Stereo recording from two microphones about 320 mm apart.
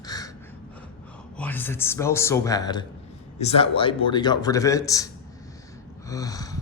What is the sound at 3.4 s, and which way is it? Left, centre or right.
A man's voice, centre.